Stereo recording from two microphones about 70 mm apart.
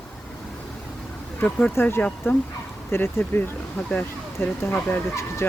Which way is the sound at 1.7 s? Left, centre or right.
Left.